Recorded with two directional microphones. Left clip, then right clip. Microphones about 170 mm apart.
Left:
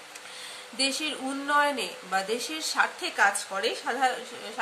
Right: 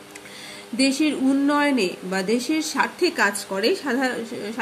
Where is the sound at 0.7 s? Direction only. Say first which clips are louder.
Right 7 dB; 20° right (ahead or behind).